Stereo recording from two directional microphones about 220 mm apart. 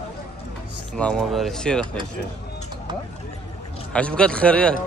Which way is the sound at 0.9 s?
5° left (ahead or behind).